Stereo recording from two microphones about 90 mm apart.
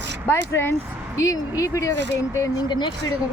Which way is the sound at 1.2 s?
40° left (ahead or behind).